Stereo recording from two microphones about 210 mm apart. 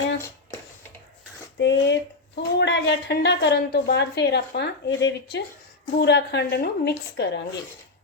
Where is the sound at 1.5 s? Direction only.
60° left (ahead or behind).